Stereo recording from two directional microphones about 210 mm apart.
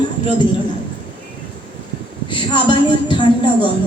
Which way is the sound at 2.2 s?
25° left (ahead or behind).